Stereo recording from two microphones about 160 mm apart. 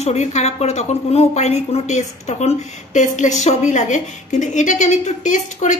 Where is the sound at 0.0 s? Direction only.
45° left (ahead or behind).